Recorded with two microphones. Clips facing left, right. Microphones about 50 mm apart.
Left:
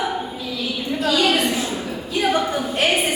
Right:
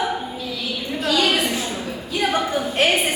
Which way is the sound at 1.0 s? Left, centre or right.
Centre.